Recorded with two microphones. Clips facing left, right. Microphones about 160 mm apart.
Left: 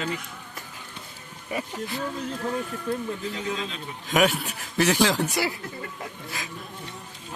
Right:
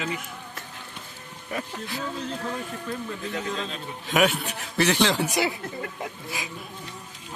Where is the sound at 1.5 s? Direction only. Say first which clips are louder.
Left 2 dB; centre (ahead or behind).